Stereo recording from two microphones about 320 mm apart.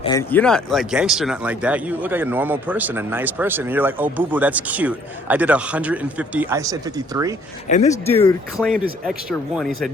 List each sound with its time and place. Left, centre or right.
0.0 s speech: centre
7.7 s speech: left
8.5 s speech: centre